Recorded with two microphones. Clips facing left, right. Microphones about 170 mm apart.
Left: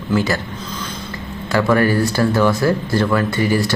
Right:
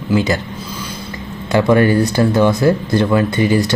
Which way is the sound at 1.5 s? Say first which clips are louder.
Right 3 dB; 20° right (ahead or behind).